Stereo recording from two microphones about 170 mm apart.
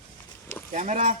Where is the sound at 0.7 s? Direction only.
45° right (ahead or behind).